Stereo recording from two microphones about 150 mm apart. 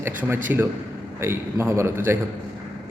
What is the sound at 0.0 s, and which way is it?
A man's voice, 15° right (ahead or behind).